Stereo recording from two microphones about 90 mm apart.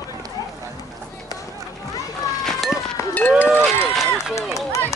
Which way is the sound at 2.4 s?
Centre (ahead or behind).